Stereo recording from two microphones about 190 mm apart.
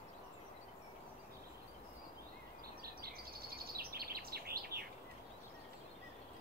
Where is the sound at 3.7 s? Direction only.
50° right (ahead or behind).